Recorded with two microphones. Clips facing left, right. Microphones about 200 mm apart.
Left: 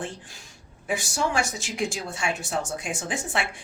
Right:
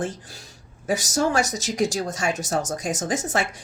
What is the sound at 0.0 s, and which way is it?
A woman's voice, 40° right (ahead or behind).